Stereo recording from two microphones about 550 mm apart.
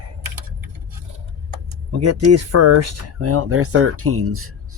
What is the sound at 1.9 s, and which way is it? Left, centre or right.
Speech, right.